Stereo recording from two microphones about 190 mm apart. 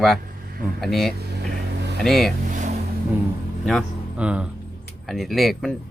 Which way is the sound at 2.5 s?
40° right (ahead or behind).